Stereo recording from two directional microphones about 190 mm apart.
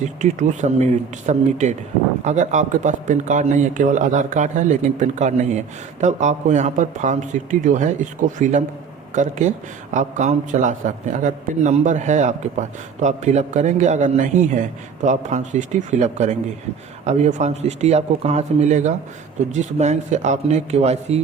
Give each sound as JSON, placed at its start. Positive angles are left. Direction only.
{"t": 0.0, "sound": "a man's voice", "side_deg": -40}